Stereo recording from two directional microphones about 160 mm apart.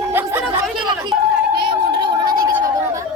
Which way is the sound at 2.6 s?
20° right (ahead or behind).